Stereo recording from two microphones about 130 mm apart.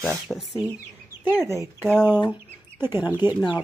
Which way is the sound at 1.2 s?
20° right (ahead or behind).